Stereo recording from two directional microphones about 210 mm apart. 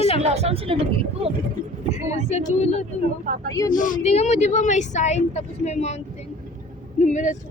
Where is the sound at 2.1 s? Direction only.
30° left (ahead or behind).